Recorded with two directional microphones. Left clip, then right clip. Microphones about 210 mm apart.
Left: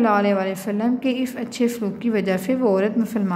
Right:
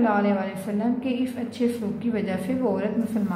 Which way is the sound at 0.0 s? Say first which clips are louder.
Left 4 dB; 45° left (ahead or behind).